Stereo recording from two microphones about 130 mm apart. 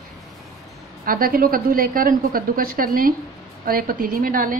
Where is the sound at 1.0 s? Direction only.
90° right.